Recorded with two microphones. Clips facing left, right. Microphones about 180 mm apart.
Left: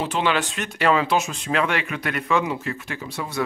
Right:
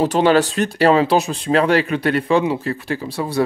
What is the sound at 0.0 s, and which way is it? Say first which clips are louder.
Speech: right 9 dB; 40° right (ahead or behind).